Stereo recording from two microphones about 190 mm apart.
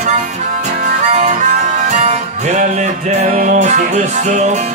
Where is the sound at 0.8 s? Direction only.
40° right (ahead or behind).